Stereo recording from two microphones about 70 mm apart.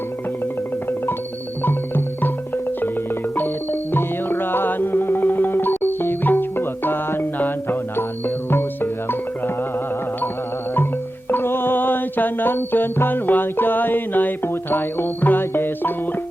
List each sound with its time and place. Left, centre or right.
2.2 s music: left
11.3 s music: left